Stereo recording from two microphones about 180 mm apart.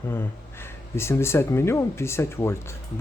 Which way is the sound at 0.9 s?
15° left (ahead or behind).